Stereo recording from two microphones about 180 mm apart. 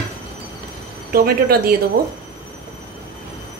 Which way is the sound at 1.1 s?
55° right (ahead or behind).